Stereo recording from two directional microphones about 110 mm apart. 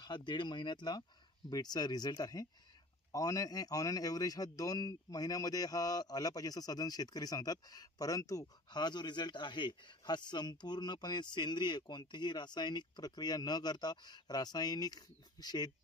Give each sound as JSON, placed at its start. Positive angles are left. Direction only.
{"t": 0.0, "sound": "a man's voice", "side_deg": 45}